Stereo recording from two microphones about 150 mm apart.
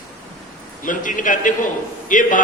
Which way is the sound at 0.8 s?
60° left (ahead or behind).